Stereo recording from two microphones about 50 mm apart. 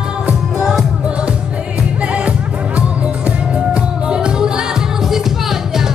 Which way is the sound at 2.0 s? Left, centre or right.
Right.